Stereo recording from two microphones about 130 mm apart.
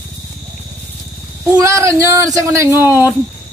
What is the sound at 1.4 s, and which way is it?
Speech, 25° right (ahead or behind).